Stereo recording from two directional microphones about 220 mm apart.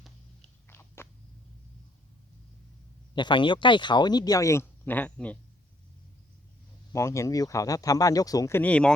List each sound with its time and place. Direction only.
0.7 s biting: 10° left (ahead or behind)
3.2 s speech: 20° left (ahead or behind)
6.9 s speech: 15° left (ahead or behind)